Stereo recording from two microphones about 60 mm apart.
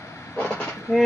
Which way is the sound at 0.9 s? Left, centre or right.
Left.